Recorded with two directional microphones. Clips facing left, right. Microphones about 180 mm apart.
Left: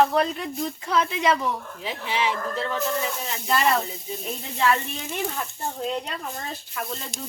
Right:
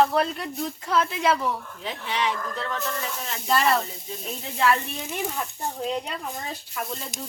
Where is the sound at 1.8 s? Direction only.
5° left (ahead or behind).